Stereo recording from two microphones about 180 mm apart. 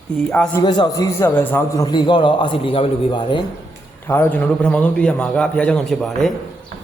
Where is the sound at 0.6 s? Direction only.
25° left (ahead or behind).